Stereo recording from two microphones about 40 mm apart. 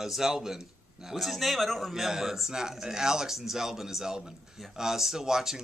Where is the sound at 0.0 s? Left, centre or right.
Centre.